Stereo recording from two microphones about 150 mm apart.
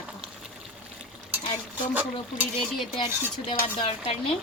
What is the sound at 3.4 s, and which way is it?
Speech, 40° left (ahead or behind).